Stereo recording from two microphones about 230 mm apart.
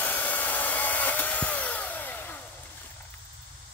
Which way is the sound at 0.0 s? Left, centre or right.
Centre.